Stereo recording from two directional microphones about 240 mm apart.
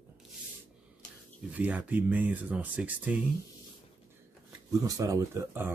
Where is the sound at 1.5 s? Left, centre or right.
Centre.